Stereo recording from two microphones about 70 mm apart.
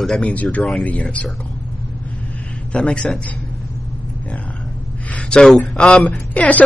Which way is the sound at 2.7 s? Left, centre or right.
Centre.